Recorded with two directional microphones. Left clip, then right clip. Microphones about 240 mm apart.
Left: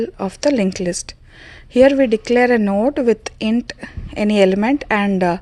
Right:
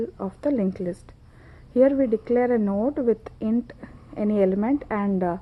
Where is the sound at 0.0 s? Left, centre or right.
Left.